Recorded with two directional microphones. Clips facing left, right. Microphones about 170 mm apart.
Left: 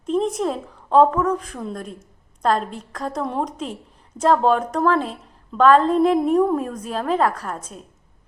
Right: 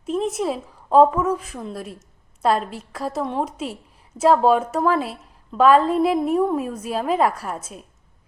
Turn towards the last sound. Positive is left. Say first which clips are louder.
# even
turn(degrees=-5)  # may be behind; listen again after turning